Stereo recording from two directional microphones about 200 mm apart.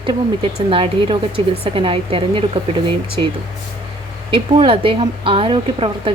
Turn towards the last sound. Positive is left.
turn(degrees=-25)  # may be behind; listen again after turning